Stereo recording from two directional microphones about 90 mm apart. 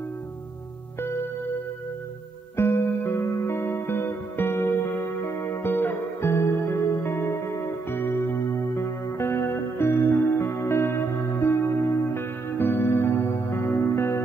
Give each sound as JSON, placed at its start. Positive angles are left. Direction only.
{"t": 2.5, "sound": "music", "side_deg": 30}